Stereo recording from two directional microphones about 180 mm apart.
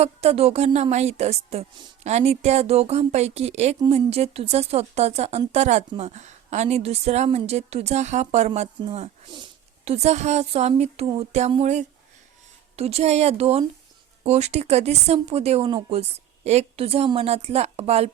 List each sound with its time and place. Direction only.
0.0 s a woman's voice: 35° right (ahead or behind)